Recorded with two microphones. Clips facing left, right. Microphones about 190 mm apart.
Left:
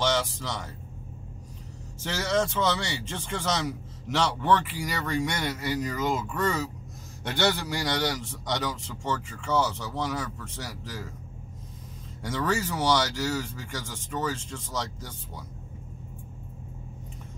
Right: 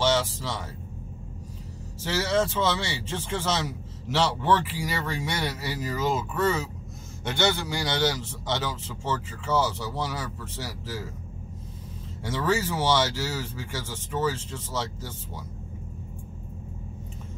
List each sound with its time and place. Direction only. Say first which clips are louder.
0.0 s a sound: right 2 dB; 5° right (ahead or behind)
2.0 s speech: right 2 dB; 5° right (ahead or behind)
7.3 s a man's voice: even; 25° right (ahead or behind)
8.0 s speech: right 3 dB; 5° right (ahead or behind)
12.2 s speech: right 2 dB; 5° right (ahead or behind)